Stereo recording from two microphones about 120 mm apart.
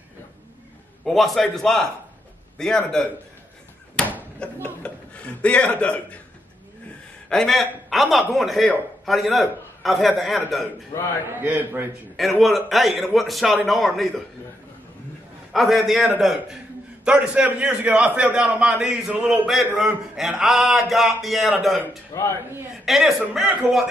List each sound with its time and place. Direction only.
1.0 s a man's voice: centre (ahead or behind)
4.0 s a sound: 5° left (ahead or behind)
4.4 s speech: 10° left (ahead or behind)
4.8 s a sound: 10° left (ahead or behind)
7.2 s a man's voice: 5° left (ahead or behind)
11.2 s a man's voice: 15° right (ahead or behind)
12.4 s a man's voice: centre (ahead or behind)
15.5 s a man's voice: centre (ahead or behind)
22.1 s speech: 30° left (ahead or behind)
22.8 s a man's voice: 5° right (ahead or behind)